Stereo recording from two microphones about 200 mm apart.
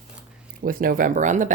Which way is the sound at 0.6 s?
45° right (ahead or behind).